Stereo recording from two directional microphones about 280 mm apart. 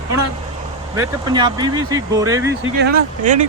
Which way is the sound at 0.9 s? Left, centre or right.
Centre.